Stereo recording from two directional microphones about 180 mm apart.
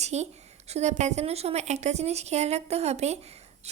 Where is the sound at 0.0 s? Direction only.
40° right (ahead or behind).